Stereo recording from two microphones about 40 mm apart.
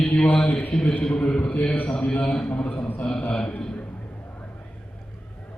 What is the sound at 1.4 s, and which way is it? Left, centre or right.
Speech, left.